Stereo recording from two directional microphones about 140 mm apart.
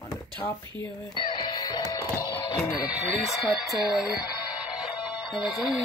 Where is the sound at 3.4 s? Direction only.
Centre (ahead or behind).